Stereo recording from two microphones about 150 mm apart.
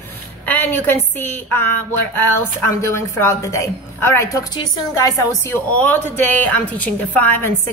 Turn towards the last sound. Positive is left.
turn(degrees=10)  # may be behind; listen again after turning